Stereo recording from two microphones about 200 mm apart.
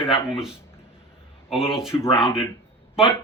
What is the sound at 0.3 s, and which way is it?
Speech, 5° right (ahead or behind).